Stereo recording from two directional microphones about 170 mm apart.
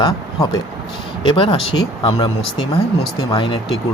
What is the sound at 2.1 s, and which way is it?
Speech, 30° left (ahead or behind).